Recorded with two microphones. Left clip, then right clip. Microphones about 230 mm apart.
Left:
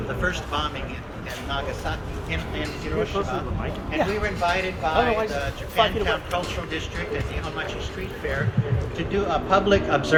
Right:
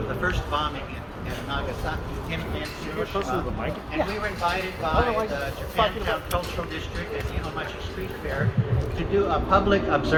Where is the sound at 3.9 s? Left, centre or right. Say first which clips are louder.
Left 4 dB; left.